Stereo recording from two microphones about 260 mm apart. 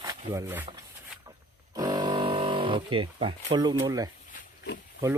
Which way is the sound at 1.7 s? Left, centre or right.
Centre.